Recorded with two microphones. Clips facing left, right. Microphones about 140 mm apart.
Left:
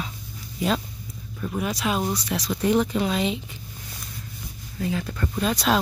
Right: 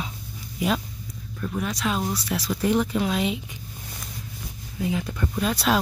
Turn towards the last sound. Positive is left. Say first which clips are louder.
# left 1 dB
turn(degrees=-5)  # may be behind; listen again after turning